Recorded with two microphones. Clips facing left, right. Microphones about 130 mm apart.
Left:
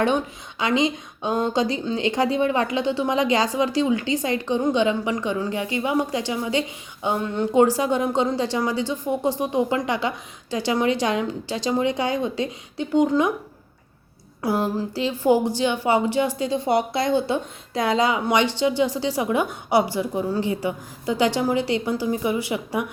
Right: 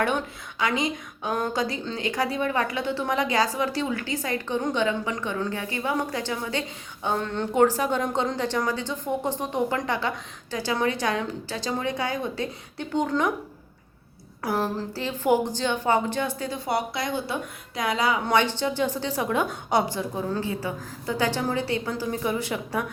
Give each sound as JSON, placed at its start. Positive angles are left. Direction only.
{"t": 0.6, "sound": "a woman's voice", "side_deg": 20}
{"t": 14.4, "sound": "speech", "side_deg": 20}
{"t": 16.5, "sound": "a woman's voice", "side_deg": 25}